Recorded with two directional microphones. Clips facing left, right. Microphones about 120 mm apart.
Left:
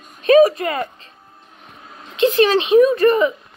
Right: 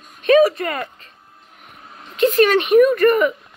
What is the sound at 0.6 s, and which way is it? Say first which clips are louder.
Speech: left 2 dB; 25° left (ahead or behind).